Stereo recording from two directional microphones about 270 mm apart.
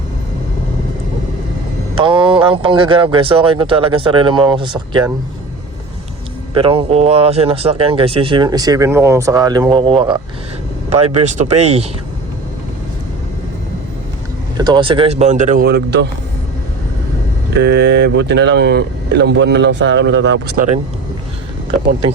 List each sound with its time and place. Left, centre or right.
2.0 s speech: centre
6.5 s speech: centre
14.6 s speech: centre; by 16.0 s right
17.6 s speech: right